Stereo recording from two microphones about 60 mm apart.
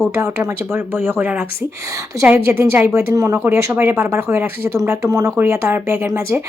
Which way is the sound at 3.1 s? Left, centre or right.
Right.